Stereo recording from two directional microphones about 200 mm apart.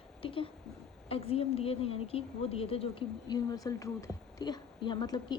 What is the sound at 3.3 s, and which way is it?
A woman's voice, 15° left (ahead or behind).